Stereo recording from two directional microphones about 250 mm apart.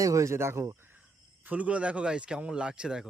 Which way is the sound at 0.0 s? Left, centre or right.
Centre.